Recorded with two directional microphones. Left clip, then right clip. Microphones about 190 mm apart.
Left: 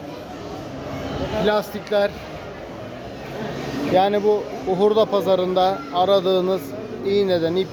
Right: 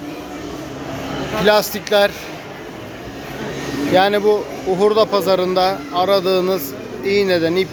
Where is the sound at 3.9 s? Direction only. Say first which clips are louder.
Right 3 dB; centre (ahead or behind).